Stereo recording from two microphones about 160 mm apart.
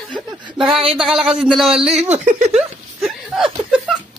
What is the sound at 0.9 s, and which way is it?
Speech, 5° right (ahead or behind).